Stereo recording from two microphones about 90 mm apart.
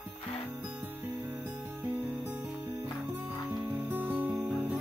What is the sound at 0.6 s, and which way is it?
Music, 15° right (ahead or behind).